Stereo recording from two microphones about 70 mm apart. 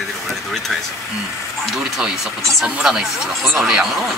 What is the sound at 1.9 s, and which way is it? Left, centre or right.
Speech, centre.